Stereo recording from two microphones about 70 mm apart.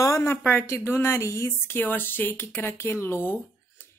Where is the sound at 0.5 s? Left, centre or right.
Left.